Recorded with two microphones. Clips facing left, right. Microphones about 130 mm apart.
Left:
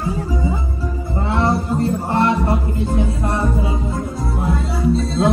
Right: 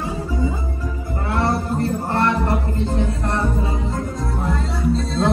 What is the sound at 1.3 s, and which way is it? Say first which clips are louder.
Music: left 2 dB; 20° left (ahead or behind).